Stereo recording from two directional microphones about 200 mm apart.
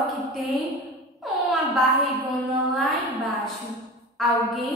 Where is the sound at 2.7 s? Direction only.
Centre (ahead or behind).